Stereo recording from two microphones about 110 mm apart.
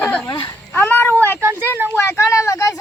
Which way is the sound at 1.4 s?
20° right (ahead or behind).